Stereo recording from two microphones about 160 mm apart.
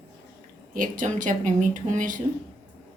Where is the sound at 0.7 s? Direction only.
55° right (ahead or behind).